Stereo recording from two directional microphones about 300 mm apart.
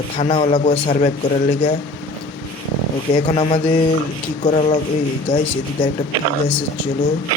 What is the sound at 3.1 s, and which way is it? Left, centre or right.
A man's voice, centre.